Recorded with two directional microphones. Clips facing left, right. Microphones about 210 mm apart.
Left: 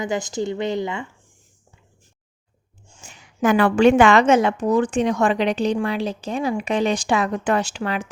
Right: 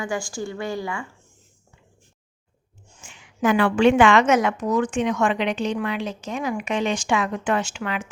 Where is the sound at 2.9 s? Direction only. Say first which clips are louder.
Left 2 dB; 40° left (ahead or behind).